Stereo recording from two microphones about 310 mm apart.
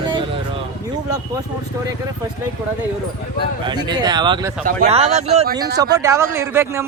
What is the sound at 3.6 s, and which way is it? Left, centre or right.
Speech, centre.